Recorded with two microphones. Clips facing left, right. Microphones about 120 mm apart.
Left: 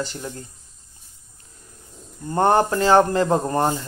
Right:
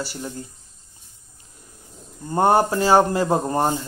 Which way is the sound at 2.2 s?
15° right (ahead or behind).